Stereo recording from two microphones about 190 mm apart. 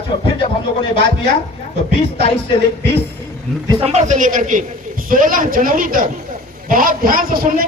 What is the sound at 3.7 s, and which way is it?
A man's voice, 30° right (ahead or behind).